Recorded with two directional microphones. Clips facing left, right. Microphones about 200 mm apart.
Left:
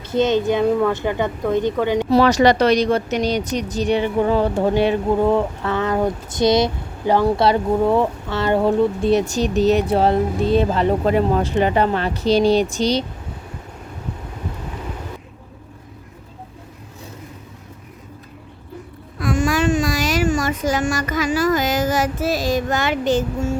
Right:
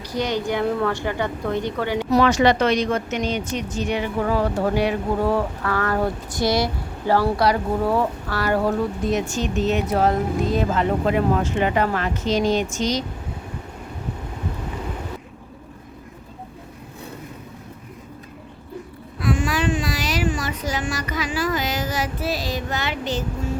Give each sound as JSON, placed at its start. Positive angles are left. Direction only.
{"t": 0.1, "sound": "a woman's voice", "side_deg": 25}
{"t": 19.2, "sound": "speech", "side_deg": 45}